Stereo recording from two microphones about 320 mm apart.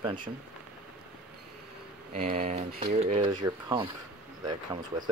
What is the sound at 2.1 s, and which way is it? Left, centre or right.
Speech, right.